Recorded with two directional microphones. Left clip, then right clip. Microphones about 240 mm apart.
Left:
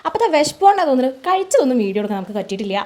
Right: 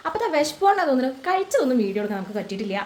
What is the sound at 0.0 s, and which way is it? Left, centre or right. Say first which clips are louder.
Speech: left 6 dB; left.